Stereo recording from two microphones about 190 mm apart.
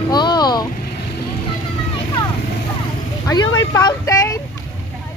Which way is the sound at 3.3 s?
20° left (ahead or behind).